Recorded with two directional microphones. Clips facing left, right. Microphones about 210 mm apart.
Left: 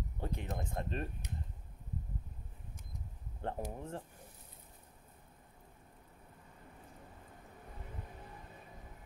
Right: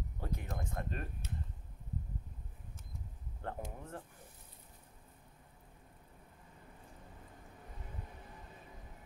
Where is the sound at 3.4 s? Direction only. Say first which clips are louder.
Left 4 dB; 25° left (ahead or behind).